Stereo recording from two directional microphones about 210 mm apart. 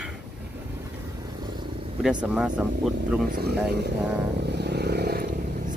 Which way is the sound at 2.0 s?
5° right (ahead or behind).